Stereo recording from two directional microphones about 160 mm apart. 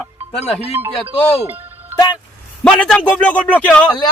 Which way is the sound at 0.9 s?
35° left (ahead or behind).